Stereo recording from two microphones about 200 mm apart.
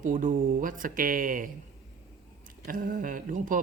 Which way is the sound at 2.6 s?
45° right (ahead or behind).